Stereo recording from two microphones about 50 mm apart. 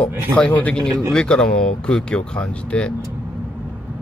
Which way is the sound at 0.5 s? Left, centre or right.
Left.